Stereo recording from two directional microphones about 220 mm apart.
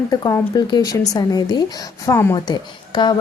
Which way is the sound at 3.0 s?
20° left (ahead or behind).